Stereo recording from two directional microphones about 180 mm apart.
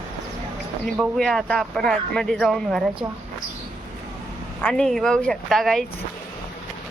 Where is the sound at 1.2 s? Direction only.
5° left (ahead or behind).